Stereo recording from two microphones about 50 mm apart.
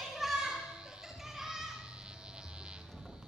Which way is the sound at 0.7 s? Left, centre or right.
Centre.